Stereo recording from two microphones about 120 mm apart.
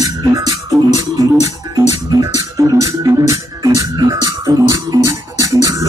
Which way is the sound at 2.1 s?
30° right (ahead or behind).